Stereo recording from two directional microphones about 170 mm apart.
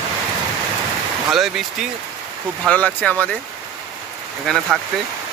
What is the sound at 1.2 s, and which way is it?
Speech, centre (ahead or behind).